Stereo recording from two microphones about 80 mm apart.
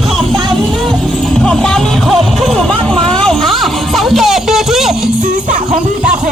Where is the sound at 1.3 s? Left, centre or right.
Centre.